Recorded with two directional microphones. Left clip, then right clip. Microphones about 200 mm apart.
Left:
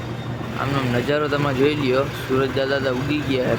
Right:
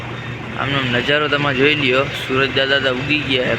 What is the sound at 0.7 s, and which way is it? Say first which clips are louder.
Speech: right 5 dB; 5° left (ahead or behind).